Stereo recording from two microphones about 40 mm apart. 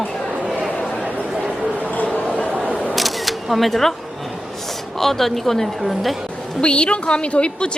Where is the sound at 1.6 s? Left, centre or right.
Right.